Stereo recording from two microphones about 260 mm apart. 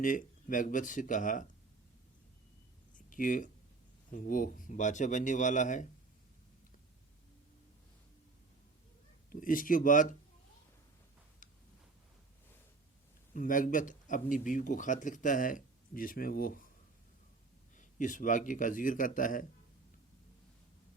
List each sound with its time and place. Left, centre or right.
0.0 s speech: left
3.1 s speech: left
9.3 s speech: left
13.3 s speech: left
17.7 s speech: left